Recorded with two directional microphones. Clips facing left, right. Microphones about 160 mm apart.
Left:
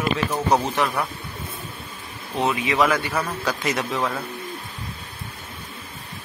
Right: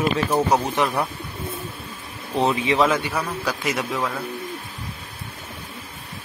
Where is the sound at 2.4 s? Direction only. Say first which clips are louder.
Right 2 dB; 30° right (ahead or behind).